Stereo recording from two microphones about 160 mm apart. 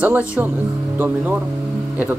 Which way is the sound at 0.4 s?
10° right (ahead or behind).